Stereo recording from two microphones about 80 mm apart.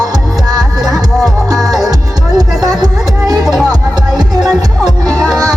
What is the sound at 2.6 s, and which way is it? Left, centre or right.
Music, right.